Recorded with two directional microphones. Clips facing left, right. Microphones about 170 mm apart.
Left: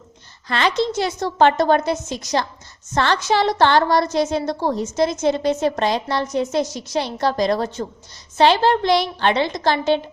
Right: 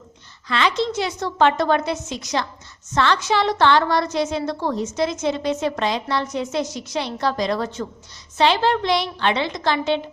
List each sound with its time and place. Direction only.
0.4 s a woman's voice: 45° left (ahead or behind)